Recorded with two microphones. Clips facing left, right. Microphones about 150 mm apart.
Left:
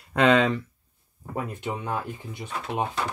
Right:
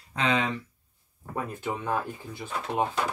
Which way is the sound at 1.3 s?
20° left (ahead or behind).